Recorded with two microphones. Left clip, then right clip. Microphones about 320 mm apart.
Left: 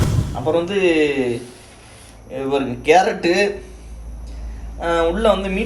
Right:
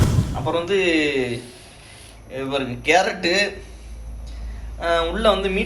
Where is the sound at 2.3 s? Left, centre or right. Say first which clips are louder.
Left 4 dB; centre.